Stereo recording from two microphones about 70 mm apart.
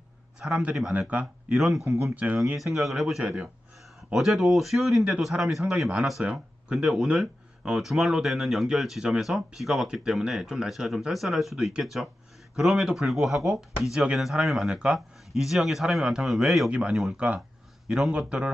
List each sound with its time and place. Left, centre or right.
0.5 s speech: centre
1.2 s a man's voice: centre
2.1 s speech: right
2.5 s a man's voice: centre
17.1 s speech: centre
17.8 s a man's voice: centre